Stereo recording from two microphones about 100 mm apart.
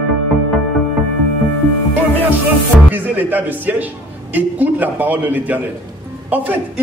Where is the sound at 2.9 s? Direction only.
20° right (ahead or behind).